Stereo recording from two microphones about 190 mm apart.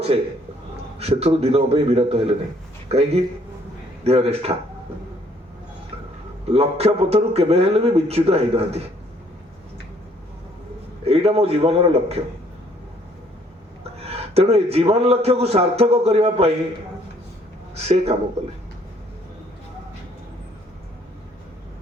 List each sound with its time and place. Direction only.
0.9 s a man's voice: 35° right (ahead or behind)
6.5 s a man's voice: 35° right (ahead or behind)
11.0 s a man's voice: 35° right (ahead or behind)
14.0 s a man's voice: 35° right (ahead or behind)
17.7 s a man's voice: 35° right (ahead or behind)